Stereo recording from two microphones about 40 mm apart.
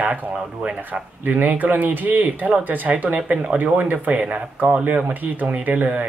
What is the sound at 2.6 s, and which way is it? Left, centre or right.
Speech, right.